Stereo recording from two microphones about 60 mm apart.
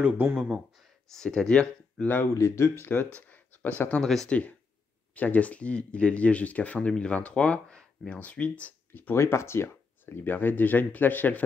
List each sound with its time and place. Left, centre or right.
0.0 s speech: right
0.4 s speech: centre
1.1 s speech: centre
2.3 s speech: left
3.2 s a sound: left
4.0 s speech: centre
4.3 s speech: left
9.1 s speech: left